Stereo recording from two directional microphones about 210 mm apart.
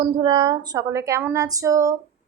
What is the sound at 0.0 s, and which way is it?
A woman's voice, 25° right (ahead or behind).